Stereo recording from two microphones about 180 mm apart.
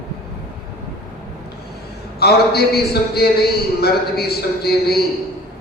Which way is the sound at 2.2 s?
60° left (ahead or behind).